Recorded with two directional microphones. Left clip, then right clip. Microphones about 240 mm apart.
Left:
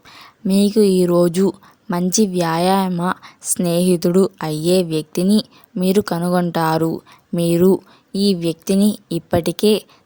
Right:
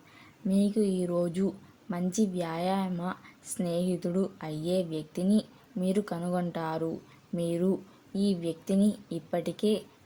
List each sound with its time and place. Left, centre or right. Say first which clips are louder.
0.1 s speech: left 11 dB; left